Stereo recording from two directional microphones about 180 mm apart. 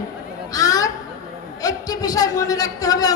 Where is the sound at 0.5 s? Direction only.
20° left (ahead or behind).